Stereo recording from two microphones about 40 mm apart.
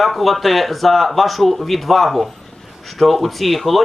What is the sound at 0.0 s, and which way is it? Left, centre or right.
Speech, centre.